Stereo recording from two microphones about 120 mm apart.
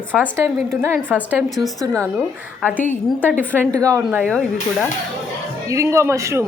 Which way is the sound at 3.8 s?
30° right (ahead or behind).